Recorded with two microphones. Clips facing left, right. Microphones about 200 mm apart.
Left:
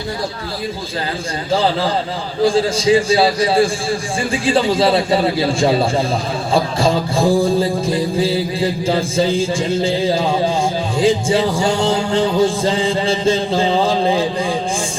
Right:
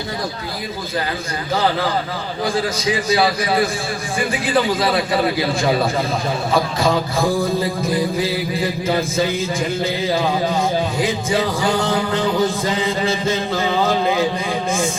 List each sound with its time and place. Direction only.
2.4 s music: 30° left (ahead or behind)